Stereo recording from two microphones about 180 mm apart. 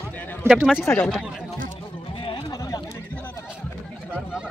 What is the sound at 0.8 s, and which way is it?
Speech, 5° left (ahead or behind).